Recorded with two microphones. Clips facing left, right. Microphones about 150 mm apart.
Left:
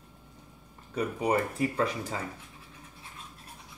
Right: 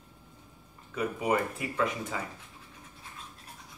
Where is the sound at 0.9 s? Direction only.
35° left (ahead or behind).